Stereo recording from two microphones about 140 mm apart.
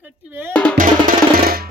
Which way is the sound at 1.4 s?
90° right.